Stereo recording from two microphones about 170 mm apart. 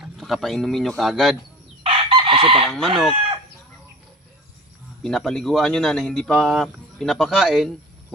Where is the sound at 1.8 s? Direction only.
35° right (ahead or behind).